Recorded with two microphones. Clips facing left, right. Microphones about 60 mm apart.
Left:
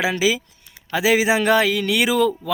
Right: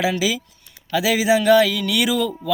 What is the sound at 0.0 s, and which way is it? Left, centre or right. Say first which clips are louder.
A man's voice: left 1 dB; left.